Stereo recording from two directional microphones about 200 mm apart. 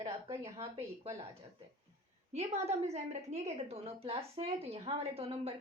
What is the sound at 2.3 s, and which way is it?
A woman's voice, 30° right (ahead or behind).